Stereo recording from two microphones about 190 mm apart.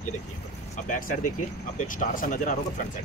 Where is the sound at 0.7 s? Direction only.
45° left (ahead or behind).